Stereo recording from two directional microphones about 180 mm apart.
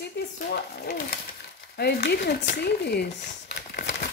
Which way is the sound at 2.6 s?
65° left (ahead or behind).